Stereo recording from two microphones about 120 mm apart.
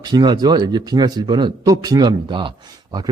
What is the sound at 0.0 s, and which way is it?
A man's voice, 35° right (ahead or behind).